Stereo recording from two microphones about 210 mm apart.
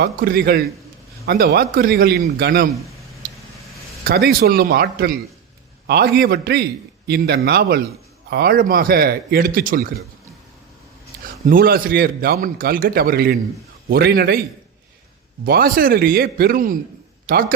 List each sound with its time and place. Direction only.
0.0 s a man's voice: 45° right (ahead or behind)
3.2 s vehicle: 40° right (ahead or behind)
4.0 s a man's voice: 45° right (ahead or behind)
11.4 s a man's voice: 45° right (ahead or behind)
15.4 s a man's voice: 45° right (ahead or behind)